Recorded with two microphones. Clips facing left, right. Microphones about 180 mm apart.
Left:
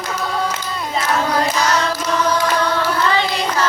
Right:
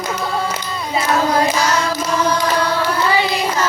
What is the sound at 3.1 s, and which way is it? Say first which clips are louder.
Carnatic music: right 1 dB; 10° right (ahead or behind).